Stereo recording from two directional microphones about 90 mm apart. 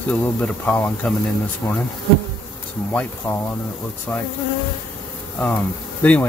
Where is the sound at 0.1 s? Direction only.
15° left (ahead or behind).